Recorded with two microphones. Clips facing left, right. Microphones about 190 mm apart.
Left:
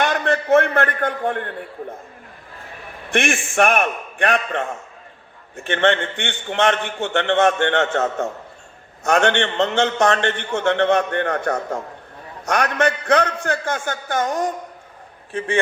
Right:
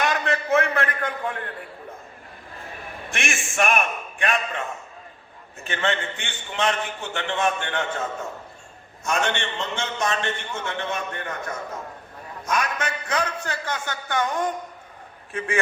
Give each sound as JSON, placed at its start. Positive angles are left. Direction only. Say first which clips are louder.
{"t": 0.0, "sound": "a man's voice", "louder": "left 4 dB", "side_deg": 60}
{"t": 3.1, "sound": "a man's voice", "louder": "left 10 dB", "side_deg": 60}
{"t": 15.3, "sound": "a man's voice", "louder": "left 4 dB", "side_deg": 30}